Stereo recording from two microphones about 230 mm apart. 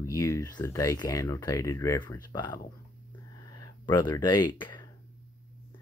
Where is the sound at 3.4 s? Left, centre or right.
Centre.